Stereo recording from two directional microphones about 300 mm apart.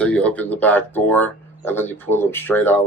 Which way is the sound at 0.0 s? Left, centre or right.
Centre.